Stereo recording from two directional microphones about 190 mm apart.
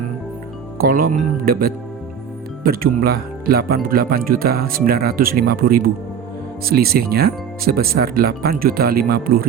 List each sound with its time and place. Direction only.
0.8 s speech: 50° right (ahead or behind)